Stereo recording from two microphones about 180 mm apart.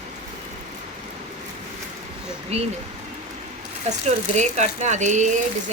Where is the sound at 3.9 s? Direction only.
40° right (ahead or behind).